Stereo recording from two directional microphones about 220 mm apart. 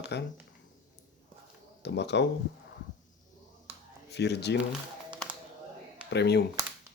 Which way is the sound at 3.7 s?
10° right (ahead or behind).